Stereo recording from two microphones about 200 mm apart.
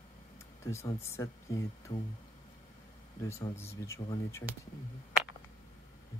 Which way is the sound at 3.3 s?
15° left (ahead or behind).